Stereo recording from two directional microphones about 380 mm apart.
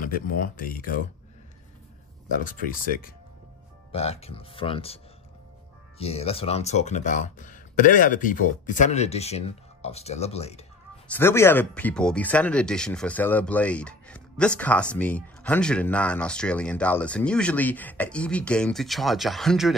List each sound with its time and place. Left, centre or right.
0.0 s speech: left
2.4 s speech: left
11.1 s speech: centre